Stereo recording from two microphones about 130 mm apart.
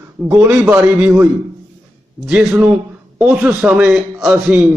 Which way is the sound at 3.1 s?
10° right (ahead or behind).